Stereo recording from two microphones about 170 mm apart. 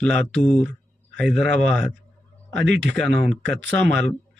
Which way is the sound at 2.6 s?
90° right.